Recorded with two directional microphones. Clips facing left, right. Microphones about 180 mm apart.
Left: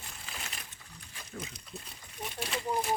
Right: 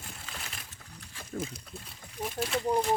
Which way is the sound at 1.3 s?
30° right (ahead or behind).